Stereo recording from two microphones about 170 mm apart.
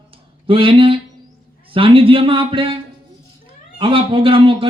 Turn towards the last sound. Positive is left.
turn(degrees=-30)  # may be behind; listen again after turning